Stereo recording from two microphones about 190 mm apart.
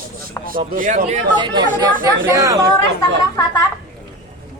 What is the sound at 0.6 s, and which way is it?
Speech, 40° right (ahead or behind).